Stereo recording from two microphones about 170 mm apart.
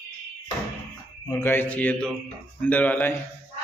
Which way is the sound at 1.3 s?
15° left (ahead or behind).